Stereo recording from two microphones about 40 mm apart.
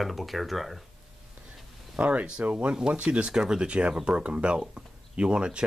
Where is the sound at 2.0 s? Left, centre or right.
Right.